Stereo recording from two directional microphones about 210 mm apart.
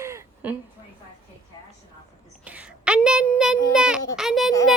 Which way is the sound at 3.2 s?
Centre (ahead or behind).